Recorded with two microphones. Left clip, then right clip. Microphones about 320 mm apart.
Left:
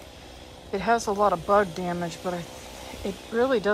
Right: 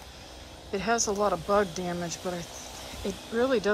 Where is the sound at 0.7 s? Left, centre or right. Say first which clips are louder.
Left 4 dB; centre.